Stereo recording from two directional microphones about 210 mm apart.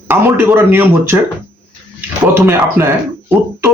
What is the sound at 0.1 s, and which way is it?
A man's voice, 10° right (ahead or behind).